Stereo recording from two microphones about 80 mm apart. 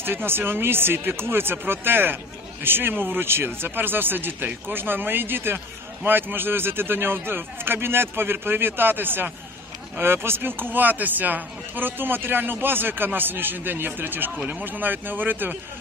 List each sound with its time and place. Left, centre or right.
0.0 s speech: right